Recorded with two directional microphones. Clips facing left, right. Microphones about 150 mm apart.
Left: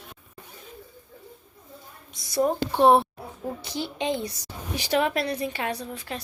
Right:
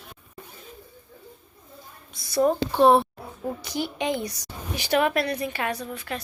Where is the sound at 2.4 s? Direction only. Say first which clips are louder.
Right 2 dB; 20° left (ahead or behind).